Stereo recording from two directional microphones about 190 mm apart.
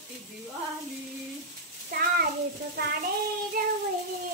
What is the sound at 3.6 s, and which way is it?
Child singing, 50° right (ahead or behind).